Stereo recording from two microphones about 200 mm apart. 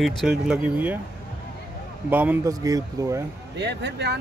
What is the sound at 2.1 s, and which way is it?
Speech, 10° right (ahead or behind).